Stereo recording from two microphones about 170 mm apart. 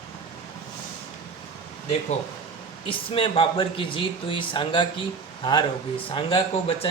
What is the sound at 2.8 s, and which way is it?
Speech, 30° left (ahead or behind).